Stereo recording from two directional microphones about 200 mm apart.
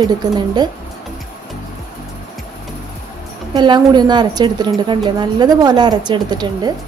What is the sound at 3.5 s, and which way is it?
Speech, 20° right (ahead or behind).